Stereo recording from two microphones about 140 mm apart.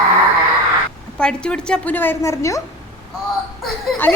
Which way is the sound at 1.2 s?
5° left (ahead or behind).